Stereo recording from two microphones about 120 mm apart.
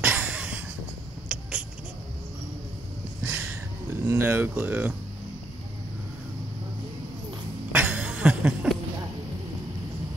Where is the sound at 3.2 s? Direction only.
15° right (ahead or behind).